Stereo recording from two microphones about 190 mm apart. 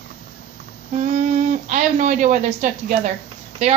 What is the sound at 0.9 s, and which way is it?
A woman's voice, 40° right (ahead or behind).